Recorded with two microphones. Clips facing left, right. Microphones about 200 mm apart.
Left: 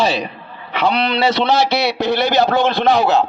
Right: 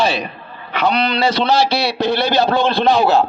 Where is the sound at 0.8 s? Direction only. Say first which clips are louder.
Even; 25° left (ahead or behind).